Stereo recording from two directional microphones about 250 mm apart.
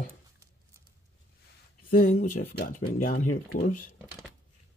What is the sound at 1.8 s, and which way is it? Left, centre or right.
Speech, left.